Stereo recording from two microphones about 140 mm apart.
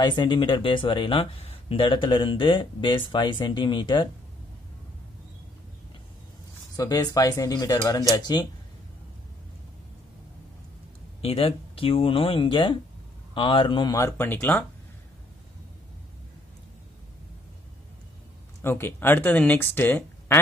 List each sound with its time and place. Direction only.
0.0 s speech: 35° left (ahead or behind)
6.8 s speech: 25° left (ahead or behind)
11.1 s speech: 45° left (ahead or behind)
13.9 s speech: 20° left (ahead or behind)
18.6 s speech: 15° left (ahead or behind)